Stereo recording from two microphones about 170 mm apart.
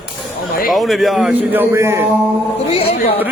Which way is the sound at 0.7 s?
Centre (ahead or behind).